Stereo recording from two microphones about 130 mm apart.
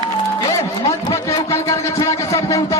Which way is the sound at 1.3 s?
25° left (ahead or behind).